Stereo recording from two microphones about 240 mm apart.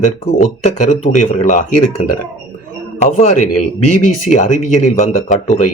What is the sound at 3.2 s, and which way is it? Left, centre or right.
Speech, left.